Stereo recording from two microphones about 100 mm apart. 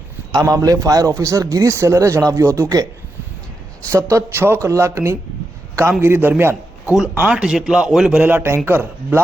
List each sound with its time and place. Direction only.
0.3 s a man's voice: 40° right (ahead or behind)
3.8 s speech: 25° right (ahead or behind)
6.0 s a man's voice: 20° right (ahead or behind)
8.2 s speech: 20° right (ahead or behind)